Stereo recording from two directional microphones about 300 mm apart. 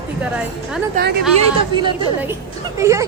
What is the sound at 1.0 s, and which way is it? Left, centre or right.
Speech, right.